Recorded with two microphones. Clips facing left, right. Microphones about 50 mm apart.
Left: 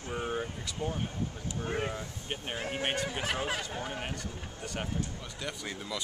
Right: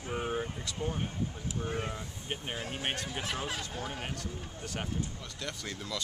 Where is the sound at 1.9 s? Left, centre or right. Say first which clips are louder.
Left 1 dB; centre.